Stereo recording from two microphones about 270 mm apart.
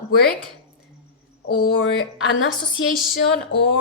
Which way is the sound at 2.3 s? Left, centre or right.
Left.